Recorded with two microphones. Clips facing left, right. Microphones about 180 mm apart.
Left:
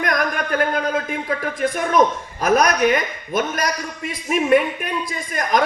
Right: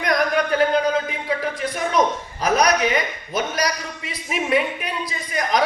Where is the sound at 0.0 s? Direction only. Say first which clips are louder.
Right 2 dB; 50° left (ahead or behind).